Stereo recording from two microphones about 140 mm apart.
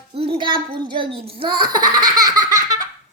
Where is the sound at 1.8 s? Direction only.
75° right (ahead or behind).